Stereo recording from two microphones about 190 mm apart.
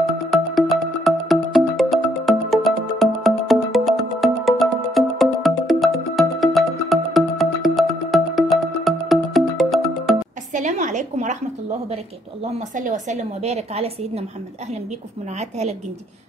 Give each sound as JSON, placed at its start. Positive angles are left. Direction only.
{"t": 0.3, "sound": "music", "side_deg": 0}
{"t": 10.5, "sound": "a sound", "side_deg": -40}
{"t": 12.7, "sound": "a woman's voice", "side_deg": -40}